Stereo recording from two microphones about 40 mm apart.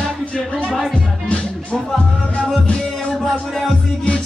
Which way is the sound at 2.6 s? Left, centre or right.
Left.